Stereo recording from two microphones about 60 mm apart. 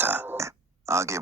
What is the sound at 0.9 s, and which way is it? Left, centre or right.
Speech, right.